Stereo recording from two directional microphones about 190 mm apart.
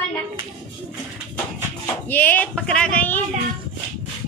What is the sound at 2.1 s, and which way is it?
Speech, 10° left (ahead or behind).